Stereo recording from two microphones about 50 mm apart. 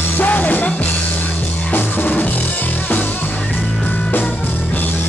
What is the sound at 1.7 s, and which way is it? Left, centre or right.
Drum kit, left.